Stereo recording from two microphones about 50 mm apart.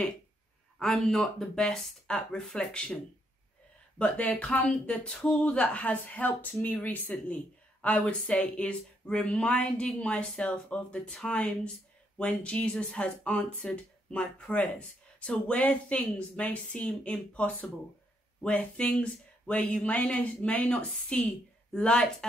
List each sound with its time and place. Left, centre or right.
0.7 s speech: centre
4.0 s speech: left